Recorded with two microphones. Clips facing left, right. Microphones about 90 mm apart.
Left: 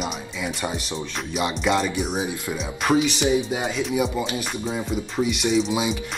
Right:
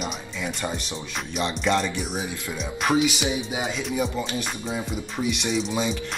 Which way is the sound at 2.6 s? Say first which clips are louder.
Left 1 dB; centre (ahead or behind).